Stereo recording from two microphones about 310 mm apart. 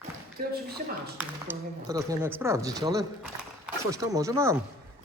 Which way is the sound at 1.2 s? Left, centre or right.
Centre.